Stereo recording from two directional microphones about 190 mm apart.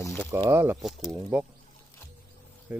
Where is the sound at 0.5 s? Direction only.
10° right (ahead or behind).